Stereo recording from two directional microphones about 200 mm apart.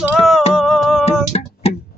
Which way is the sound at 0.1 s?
Centre (ahead or behind).